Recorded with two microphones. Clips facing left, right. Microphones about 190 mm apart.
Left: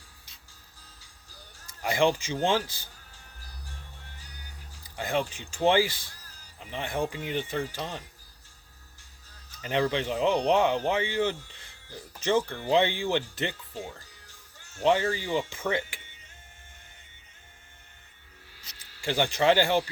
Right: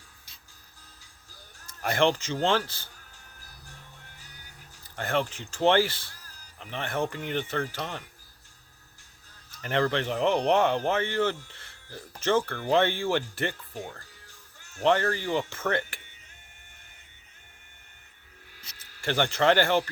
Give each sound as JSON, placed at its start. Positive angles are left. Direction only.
{"t": 1.6, "sound": "speech", "side_deg": 15}
{"t": 4.8, "sound": "speech", "side_deg": 15}
{"t": 7.1, "sound": "speech", "side_deg": -55}
{"t": 7.3, "sound": "speech", "side_deg": 15}
{"t": 9.6, "sound": "speech", "side_deg": 15}
{"t": 14.8, "sound": "speech", "side_deg": 15}
{"t": 18.8, "sound": "speech", "side_deg": 15}